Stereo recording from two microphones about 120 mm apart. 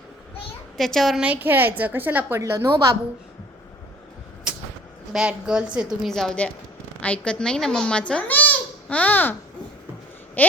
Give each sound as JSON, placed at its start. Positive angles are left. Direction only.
{"t": 0.8, "sound": "a woman's voice", "side_deg": 0}
{"t": 1.2, "sound": "a woman's voice", "side_deg": -15}
{"t": 5.1, "sound": "a woman's voice", "side_deg": -5}
{"t": 10.4, "sound": "a sound", "side_deg": 15}